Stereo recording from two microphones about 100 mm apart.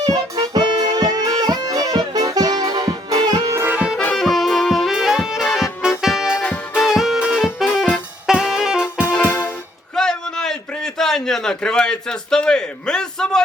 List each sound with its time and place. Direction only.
0.0 s music: 40° right (ahead or behind)
3.7 s music: 10° right (ahead or behind)
4.2 s music: centre (ahead or behind)
6.4 s music: 15° left (ahead or behind)
6.8 s music: 5° right (ahead or behind)
8.3 s saxophone: 5° right (ahead or behind)
9.1 s music: 20° left (ahead or behind)
9.9 s a sound: 5° left (ahead or behind)